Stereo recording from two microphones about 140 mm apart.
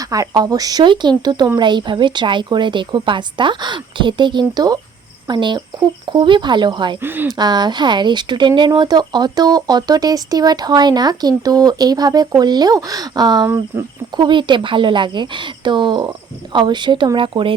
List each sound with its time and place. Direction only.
0.0 s a woman's voice: 25° right (ahead or behind)
7.0 s speech: 15° right (ahead or behind)
7.3 s a woman's voice: 30° right (ahead or behind)